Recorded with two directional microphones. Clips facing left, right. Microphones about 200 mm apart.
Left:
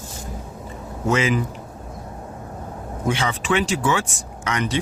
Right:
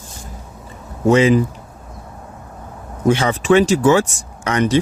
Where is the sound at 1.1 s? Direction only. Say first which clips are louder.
Right 8 dB; 35° right (ahead or behind).